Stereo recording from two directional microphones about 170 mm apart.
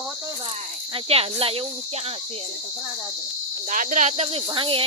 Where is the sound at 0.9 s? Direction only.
35° right (ahead or behind).